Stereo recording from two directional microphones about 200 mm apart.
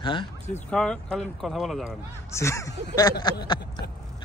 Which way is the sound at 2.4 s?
15° left (ahead or behind).